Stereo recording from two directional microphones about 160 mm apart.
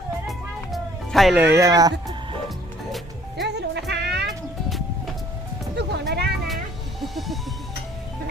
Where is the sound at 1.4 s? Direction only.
15° right (ahead or behind).